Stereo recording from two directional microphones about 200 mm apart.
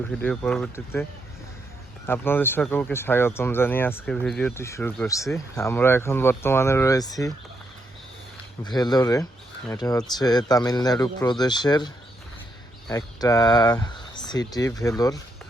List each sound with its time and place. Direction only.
0.2 s speech: 5° left (ahead or behind)
2.0 s speech: 10° left (ahead or behind)
8.6 s speech: 20° left (ahead or behind)
12.9 s speech: 20° left (ahead or behind)